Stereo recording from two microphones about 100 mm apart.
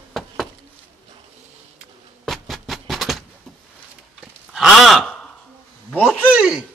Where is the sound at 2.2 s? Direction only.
Centre (ahead or behind).